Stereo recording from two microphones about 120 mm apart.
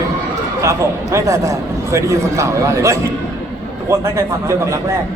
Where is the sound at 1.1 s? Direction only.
25° right (ahead or behind).